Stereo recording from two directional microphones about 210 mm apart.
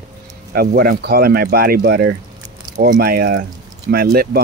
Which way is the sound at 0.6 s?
45° right (ahead or behind).